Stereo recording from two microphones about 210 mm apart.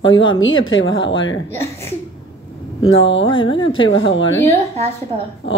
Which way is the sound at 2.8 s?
60° left (ahead or behind).